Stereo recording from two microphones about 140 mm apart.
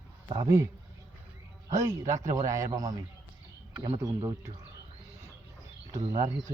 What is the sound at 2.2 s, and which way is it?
Speech, 60° right (ahead or behind).